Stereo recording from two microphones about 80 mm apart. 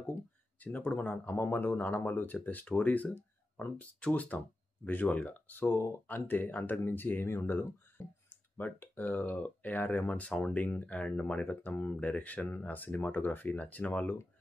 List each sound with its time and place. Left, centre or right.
0.6 s speech: left